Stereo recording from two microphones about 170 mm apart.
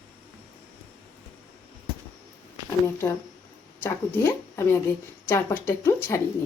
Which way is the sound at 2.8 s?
15° left (ahead or behind).